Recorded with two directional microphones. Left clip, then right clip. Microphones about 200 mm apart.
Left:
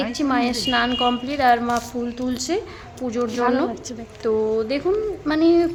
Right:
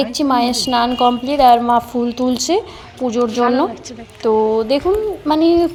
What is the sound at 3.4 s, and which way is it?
Speech, 15° left (ahead or behind).